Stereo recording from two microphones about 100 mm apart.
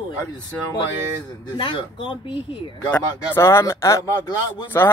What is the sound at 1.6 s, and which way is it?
Speech, 55° left (ahead or behind).